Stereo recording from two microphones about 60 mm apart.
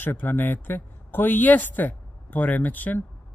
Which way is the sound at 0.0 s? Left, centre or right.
Left.